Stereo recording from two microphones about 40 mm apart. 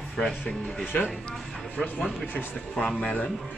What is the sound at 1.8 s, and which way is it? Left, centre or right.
Speech, centre.